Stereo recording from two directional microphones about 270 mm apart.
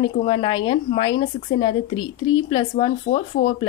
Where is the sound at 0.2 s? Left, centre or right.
Centre.